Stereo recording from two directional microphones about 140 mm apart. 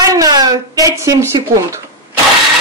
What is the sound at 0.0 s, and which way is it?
Speech, 25° right (ahead or behind).